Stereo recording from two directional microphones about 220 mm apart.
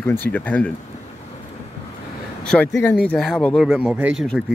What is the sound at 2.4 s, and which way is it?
Speech, 5° left (ahead or behind).